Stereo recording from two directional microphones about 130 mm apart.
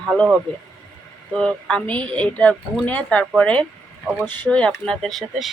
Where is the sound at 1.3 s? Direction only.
5° left (ahead or behind).